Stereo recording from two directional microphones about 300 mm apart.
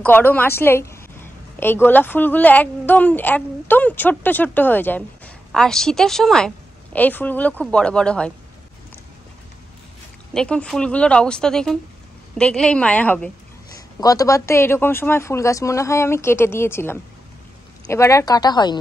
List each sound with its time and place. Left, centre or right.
0.0 s a woman's voice: centre
10.3 s a woman's voice: centre